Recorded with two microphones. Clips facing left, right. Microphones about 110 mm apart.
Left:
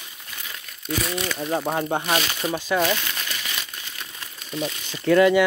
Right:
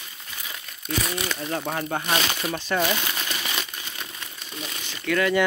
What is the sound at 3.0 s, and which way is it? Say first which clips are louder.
Crumpling: right 2 dB; 20° right (ahead or behind).